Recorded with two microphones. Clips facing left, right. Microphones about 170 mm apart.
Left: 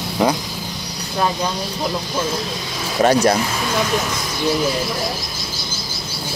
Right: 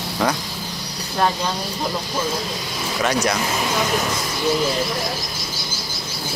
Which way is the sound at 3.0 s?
30° left (ahead or behind).